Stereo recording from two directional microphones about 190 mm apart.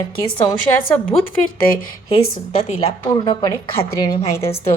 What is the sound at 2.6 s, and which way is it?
Speech, 30° left (ahead or behind).